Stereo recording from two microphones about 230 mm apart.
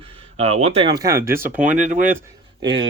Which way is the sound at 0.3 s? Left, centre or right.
Right.